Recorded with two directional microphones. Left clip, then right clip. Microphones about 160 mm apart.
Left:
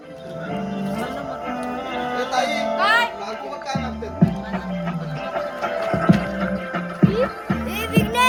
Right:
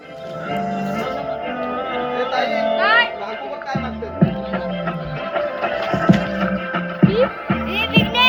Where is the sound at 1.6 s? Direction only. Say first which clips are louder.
Right 4 dB; 35° right (ahead or behind).